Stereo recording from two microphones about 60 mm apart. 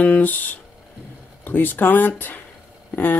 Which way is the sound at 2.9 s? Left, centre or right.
Left.